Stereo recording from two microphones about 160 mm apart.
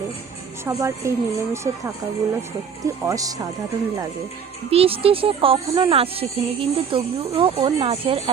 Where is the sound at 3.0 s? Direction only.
20° right (ahead or behind).